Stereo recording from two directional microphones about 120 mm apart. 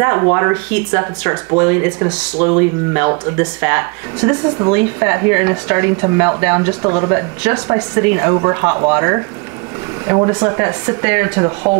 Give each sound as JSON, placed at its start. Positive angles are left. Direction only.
{"t": 0.0, "sound": "speech", "side_deg": -25}